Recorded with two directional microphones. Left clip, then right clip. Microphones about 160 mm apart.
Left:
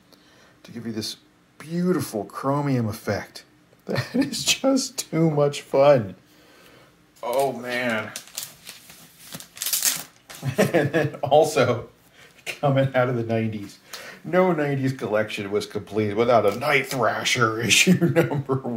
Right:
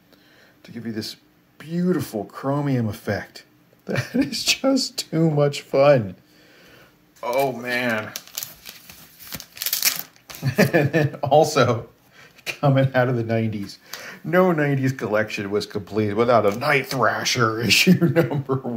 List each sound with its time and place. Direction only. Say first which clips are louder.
0.6 s speech: right 1 dB; 10° right (ahead or behind); by 6.0 s 25° right (ahead or behind)
7.2 s speech: right 1 dB; 45° right (ahead or behind)
10.4 s speech: right 2 dB; 40° right (ahead or behind); by 18.8 s 10° right (ahead or behind)